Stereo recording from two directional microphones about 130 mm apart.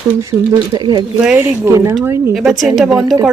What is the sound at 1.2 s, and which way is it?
Speech, 5° right (ahead or behind).